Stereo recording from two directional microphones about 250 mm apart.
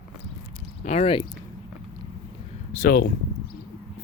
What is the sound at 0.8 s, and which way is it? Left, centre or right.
Speech, left.